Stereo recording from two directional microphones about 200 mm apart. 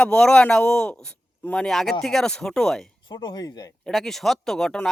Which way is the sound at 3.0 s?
20° left (ahead or behind).